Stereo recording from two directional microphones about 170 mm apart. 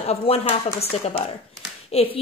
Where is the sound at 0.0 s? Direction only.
35° left (ahead or behind).